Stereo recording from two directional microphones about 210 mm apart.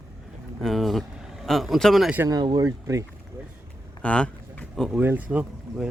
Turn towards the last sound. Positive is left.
turn(degrees=-5)  # may be behind; listen again after turning